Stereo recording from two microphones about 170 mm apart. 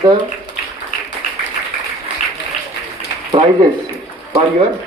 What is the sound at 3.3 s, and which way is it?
Speech, 30° right (ahead or behind).